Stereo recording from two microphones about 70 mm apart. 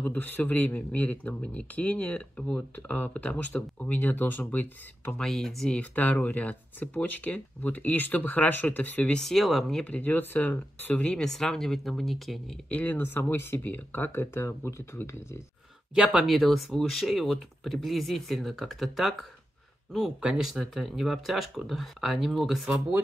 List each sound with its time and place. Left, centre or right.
0.0 s speech: left
5.2 s speech: centre
5.8 s speech: left
9.1 s speech: centre
9.8 s speech: left
11.1 s speech: centre
12.6 s speech: left
15.9 s speech: centre
20.2 s speech: centre